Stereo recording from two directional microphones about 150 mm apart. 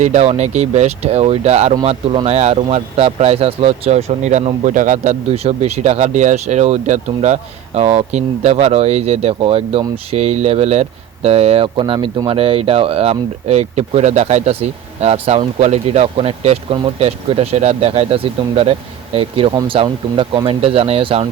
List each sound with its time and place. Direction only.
0.0 s speech: 50° right (ahead or behind)